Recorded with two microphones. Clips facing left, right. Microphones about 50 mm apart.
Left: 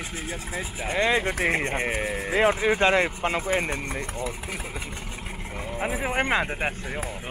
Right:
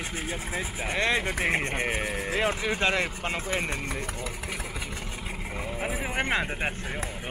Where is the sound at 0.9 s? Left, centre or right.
Centre.